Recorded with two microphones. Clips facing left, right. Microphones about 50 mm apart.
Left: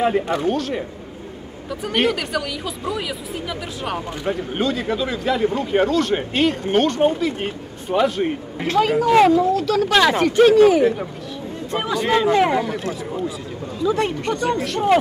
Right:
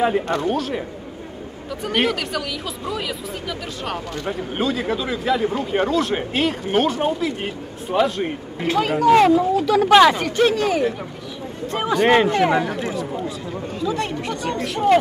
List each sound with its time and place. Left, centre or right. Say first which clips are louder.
0.0 s speech: left 1 dB; centre
9.3 s speech: even; centre
10.1 s speech: left 6 dB; centre
10.8 s speech: left 4 dB; centre
12.0 s speech: right 2 dB; right
12.5 s speech: even; right
12.9 s speech: even; centre